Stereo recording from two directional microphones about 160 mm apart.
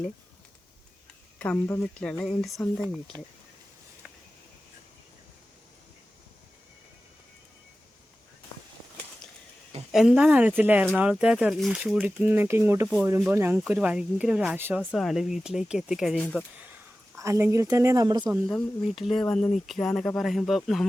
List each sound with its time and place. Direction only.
1.4 s speech: 10° left (ahead or behind)
9.9 s speech: 5° right (ahead or behind)
14.8 s speech: centre (ahead or behind)
17.2 s speech: 20° right (ahead or behind)
18.4 s speech: centre (ahead or behind)